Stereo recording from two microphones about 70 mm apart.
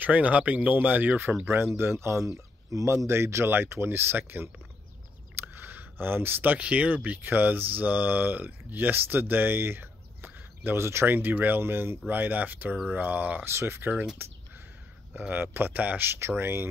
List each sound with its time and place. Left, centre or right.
0.0 s speech: right
3.1 s speech: right
13.5 s speech: right
15.1 s speech: right